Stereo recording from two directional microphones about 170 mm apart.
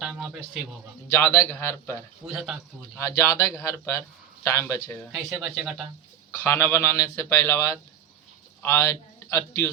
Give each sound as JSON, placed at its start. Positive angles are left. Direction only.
{"t": 0.0, "sound": "a sound", "side_deg": -5}
{"t": 1.1, "sound": "speech", "side_deg": 15}
{"t": 2.2, "sound": "a man's voice", "side_deg": -5}
{"t": 3.0, "sound": "speech", "side_deg": 15}
{"t": 5.1, "sound": "a man's voice", "side_deg": 0}
{"t": 6.4, "sound": "a man's voice", "side_deg": 15}